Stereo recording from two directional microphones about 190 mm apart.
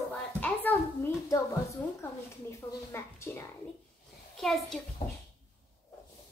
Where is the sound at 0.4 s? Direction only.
10° left (ahead or behind).